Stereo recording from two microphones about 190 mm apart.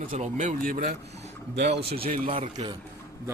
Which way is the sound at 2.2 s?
30° right (ahead or behind).